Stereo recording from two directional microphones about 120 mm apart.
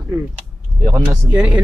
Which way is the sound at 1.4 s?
10° right (ahead or behind).